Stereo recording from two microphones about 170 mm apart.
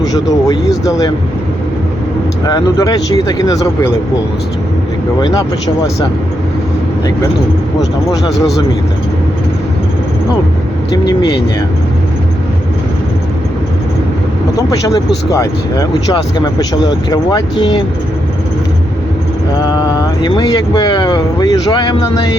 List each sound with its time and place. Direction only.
0.0 s speech: 20° left (ahead or behind)
2.5 s speech: 20° left (ahead or behind)
5.2 s speech: 20° left (ahead or behind)
14.5 s speech: 20° left (ahead or behind)
19.5 s speech: 25° left (ahead or behind)